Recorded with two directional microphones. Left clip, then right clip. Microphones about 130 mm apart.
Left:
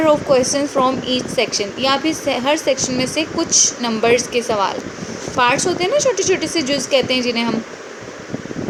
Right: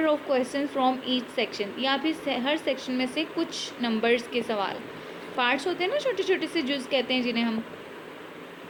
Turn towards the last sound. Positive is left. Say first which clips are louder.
# left 9 dB
turn(degrees=20)  # may be behind; listen again after turning